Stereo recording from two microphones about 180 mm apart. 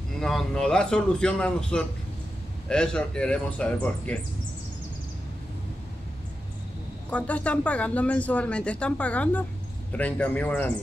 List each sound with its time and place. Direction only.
0.2 s a man's voice: centre (ahead or behind)
7.1 s speech: 10° left (ahead or behind)